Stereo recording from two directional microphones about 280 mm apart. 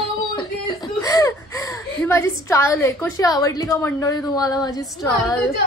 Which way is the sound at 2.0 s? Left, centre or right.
Centre.